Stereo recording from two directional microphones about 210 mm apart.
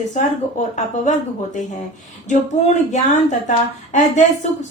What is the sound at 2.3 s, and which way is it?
A woman's voice, 35° left (ahead or behind).